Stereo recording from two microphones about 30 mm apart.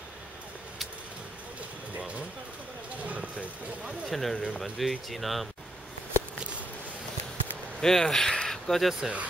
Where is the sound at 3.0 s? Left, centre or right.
Right.